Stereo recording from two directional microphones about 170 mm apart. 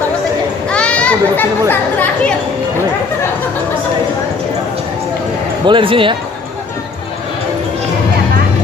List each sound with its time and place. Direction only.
0.7 s children playing: 5° left (ahead or behind)
1.7 s speech: 10° left (ahead or behind)
5.6 s speech: 30° right (ahead or behind)